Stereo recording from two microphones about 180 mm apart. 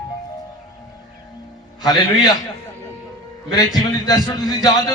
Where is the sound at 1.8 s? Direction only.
20° left (ahead or behind).